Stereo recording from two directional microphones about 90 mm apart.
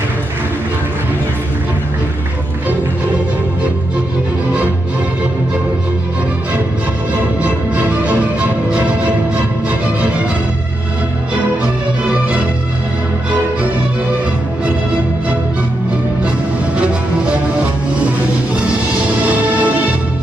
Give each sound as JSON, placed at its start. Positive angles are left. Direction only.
{"t": 7.4, "sound": "music", "side_deg": -15}
{"t": 16.7, "sound": "music", "side_deg": -15}
{"t": 19.2, "sound": "music", "side_deg": -15}